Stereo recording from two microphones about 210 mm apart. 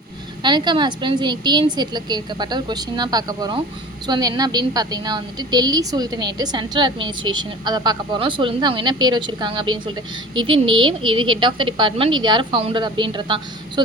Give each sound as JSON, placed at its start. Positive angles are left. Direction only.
{"t": 0.4, "sound": "a woman's voice", "side_deg": -20}